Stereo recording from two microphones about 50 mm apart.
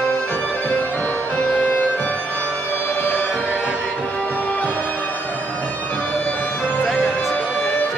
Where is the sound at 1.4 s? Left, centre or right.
Left.